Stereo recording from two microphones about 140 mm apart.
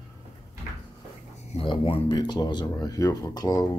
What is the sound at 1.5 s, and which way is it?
Speech, 40° left (ahead or behind).